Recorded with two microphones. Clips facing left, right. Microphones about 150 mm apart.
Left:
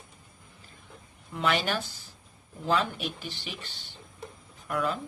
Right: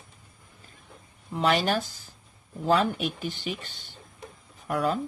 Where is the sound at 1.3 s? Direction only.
35° right (ahead or behind).